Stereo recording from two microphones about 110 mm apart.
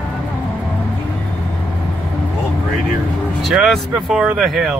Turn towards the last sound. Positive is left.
turn(degrees=0)  # may be behind; listen again after turning